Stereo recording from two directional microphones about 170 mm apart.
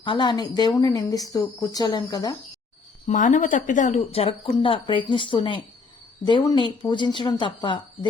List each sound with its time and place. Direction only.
0.0 s a woman's voice: 30° left (ahead or behind)
3.1 s a woman's voice: 50° left (ahead or behind); by 7.8 s 30° left (ahead or behind)